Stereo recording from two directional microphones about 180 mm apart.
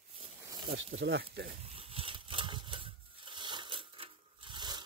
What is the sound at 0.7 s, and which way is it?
Speech, 85° right.